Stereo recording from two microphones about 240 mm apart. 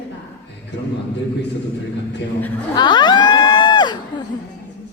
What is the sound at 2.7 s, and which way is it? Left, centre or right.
Crowd, centre.